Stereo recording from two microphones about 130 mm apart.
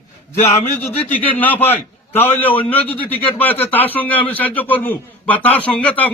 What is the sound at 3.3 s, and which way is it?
A man's voice, 15° left (ahead or behind).